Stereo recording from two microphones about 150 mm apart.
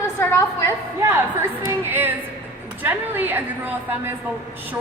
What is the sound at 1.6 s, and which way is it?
A woman's voice, 15° right (ahead or behind).